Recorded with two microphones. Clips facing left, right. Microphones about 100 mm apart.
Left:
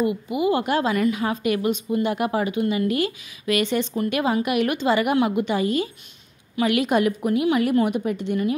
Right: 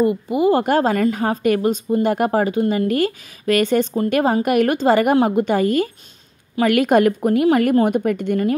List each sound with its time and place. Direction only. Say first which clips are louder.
0.0 s a woman's voice: right 5 dB; 40° right (ahead or behind)